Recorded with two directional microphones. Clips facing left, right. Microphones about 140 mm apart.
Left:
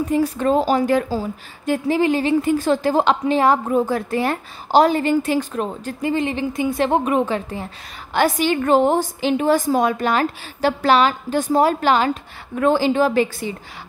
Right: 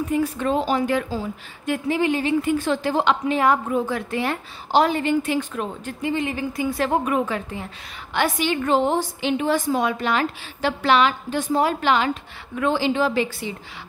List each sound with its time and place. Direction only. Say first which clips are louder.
0.1 s a woman's voice: left 4 dB; 35° left (ahead or behind)
6.3 s a woman's voice: left 3 dB; 25° left (ahead or behind)
8.1 s a woman's voice: left 4 dB; 40° left (ahead or behind)